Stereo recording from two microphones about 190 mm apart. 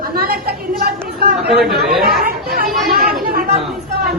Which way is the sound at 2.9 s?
50° right (ahead or behind).